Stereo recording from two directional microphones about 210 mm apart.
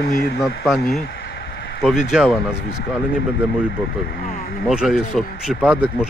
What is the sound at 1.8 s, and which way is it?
Speech, centre (ahead or behind).